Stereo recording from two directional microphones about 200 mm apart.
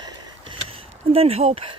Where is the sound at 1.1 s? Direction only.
30° right (ahead or behind).